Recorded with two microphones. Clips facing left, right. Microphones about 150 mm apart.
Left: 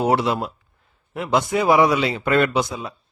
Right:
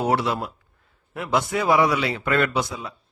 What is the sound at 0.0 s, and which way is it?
A man's voice, 20° left (ahead or behind).